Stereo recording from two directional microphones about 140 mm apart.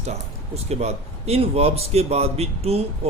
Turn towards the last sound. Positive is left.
turn(degrees=-45)  # may be behind; listen again after turning